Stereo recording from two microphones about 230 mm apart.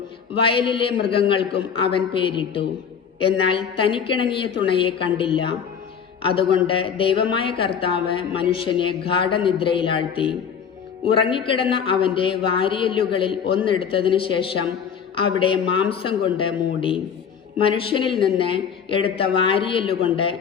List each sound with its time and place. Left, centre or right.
0.4 s speech: left